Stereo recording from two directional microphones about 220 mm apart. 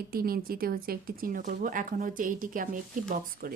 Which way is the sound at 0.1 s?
40° right (ahead or behind).